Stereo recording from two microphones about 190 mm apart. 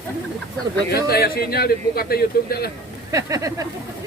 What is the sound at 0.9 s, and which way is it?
A man's voice, 55° left (ahead or behind).